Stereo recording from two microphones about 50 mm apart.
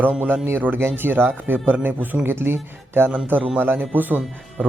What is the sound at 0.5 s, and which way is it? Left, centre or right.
Speech, right.